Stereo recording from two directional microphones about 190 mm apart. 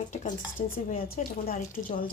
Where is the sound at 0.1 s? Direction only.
40° left (ahead or behind).